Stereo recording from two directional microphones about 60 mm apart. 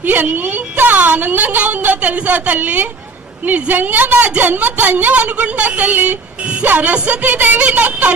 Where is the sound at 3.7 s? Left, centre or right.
Right.